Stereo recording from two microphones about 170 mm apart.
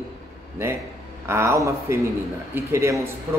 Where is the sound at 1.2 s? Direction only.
15° right (ahead or behind).